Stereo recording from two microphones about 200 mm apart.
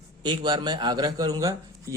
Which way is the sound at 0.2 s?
20° right (ahead or behind).